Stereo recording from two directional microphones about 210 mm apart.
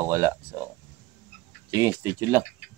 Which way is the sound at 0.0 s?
15° right (ahead or behind).